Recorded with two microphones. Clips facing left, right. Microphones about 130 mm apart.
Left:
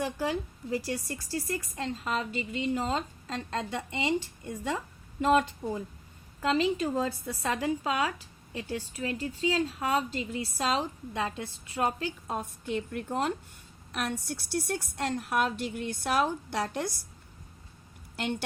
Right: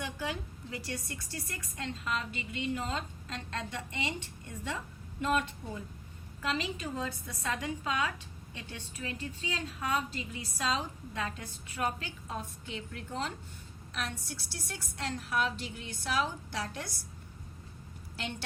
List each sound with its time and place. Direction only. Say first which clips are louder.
0.0 s a woman's voice: left 7 dB; 35° left (ahead or behind)
5.2 s a woman's voice: left 7 dB; 35° left (ahead or behind)
12.3 s a woman's voice: left 6 dB; 50° left (ahead or behind)
18.2 s a woman's voice: left 7 dB; 55° left (ahead or behind)